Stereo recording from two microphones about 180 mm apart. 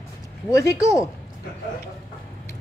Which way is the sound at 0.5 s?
15° left (ahead or behind).